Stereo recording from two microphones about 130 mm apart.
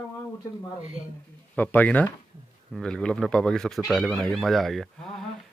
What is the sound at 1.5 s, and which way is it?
Speech, 10° left (ahead or behind).